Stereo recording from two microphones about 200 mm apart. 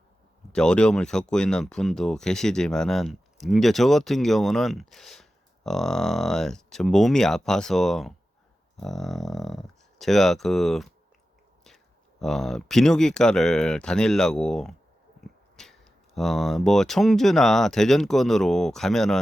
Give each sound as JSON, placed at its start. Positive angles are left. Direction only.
{"t": 0.5, "sound": "speech", "side_deg": 5}
{"t": 12.2, "sound": "speech", "side_deg": 0}